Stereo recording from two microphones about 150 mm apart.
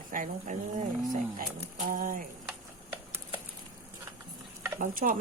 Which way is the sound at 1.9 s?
65° right (ahead or behind).